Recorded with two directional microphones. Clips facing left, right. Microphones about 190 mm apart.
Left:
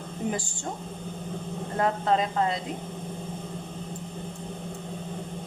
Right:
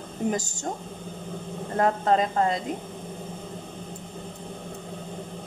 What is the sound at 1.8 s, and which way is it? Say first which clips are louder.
Speech: right 3 dB; 45° right (ahead or behind).